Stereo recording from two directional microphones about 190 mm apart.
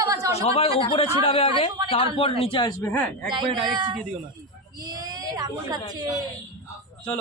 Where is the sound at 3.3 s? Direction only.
25° right (ahead or behind).